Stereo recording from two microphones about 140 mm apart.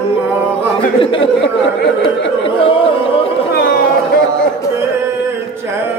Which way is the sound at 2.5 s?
40° left (ahead or behind).